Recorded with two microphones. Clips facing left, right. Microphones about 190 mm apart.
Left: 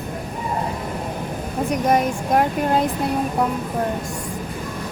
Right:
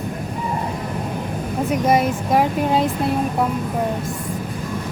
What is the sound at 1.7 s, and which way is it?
Speech, 5° right (ahead or behind).